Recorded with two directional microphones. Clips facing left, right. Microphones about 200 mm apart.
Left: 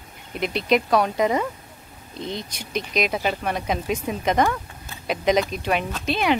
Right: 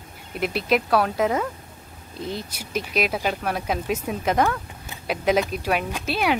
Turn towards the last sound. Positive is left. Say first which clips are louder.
# left 1 dB
turn(degrees=-5)  # may be behind; listen again after turning